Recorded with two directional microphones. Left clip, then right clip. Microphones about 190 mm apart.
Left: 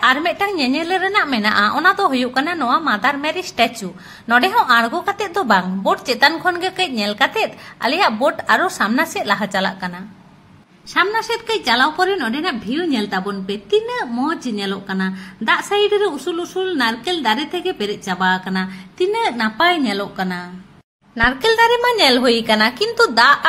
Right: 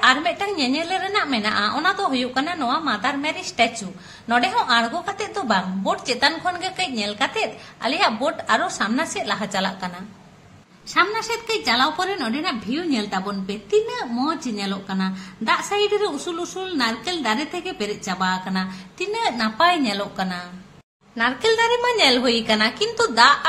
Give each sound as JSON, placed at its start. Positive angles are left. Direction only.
{"t": 0.0, "sound": "a woman's voice", "side_deg": 30}
{"t": 11.0, "sound": "a woman's voice", "side_deg": 25}
{"t": 21.2, "sound": "a woman's voice", "side_deg": 30}